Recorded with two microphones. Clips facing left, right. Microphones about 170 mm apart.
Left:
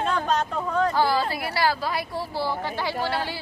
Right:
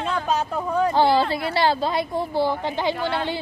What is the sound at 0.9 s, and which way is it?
Speech, 25° right (ahead or behind).